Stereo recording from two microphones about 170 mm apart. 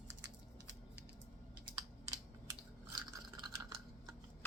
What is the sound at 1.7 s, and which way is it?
Computer keyboard, 20° right (ahead or behind).